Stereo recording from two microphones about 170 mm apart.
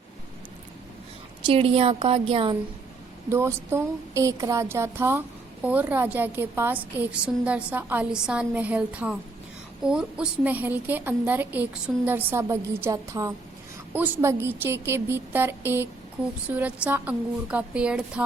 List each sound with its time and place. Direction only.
1.5 s a woman's voice: 35° right (ahead or behind)
3.2 s a woman's voice: 15° right (ahead or behind)